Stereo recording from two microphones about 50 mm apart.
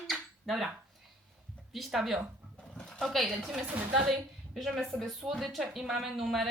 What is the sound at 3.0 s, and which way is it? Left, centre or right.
Speech, centre.